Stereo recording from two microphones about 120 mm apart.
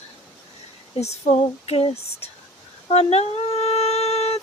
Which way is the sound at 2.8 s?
60° left (ahead or behind).